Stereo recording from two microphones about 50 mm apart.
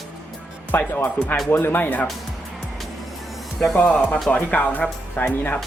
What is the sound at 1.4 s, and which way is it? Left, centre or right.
Speech, left.